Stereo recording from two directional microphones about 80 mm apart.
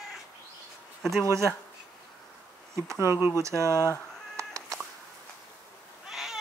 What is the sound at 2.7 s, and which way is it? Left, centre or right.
Speech, right.